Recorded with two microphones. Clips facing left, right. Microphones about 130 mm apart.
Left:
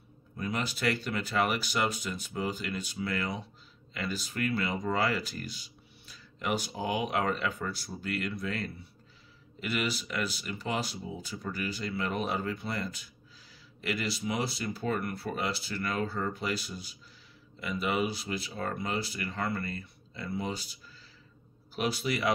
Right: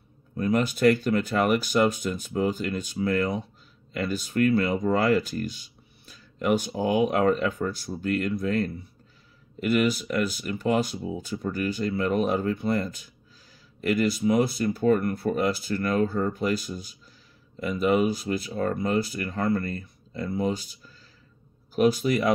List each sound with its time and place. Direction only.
0.4 s speech: 50° right (ahead or behind)